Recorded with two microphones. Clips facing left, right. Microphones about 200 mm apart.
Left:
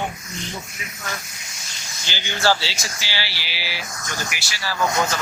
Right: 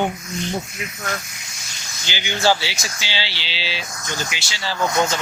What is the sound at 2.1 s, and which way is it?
Speech, 15° right (ahead or behind).